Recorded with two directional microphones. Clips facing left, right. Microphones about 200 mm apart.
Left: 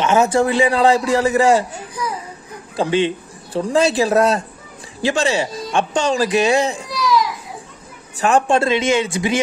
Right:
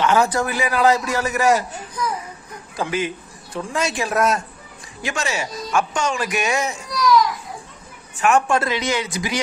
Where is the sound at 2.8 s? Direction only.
30° left (ahead or behind).